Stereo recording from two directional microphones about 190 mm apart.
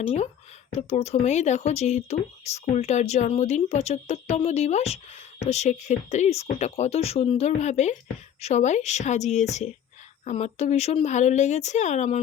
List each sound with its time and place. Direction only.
0.7 s speech: 35° left (ahead or behind)